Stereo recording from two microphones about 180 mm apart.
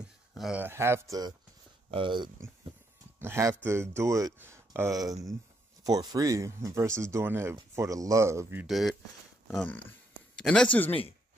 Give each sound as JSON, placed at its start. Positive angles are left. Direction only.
{"t": 0.0, "sound": "speech", "side_deg": -5}
{"t": 3.2, "sound": "speech", "side_deg": -15}
{"t": 8.6, "sound": "speech", "side_deg": 0}